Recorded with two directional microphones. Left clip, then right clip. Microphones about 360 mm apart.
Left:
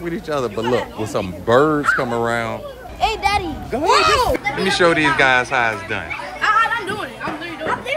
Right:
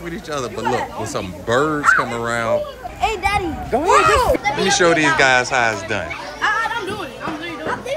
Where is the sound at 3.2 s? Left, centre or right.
Centre.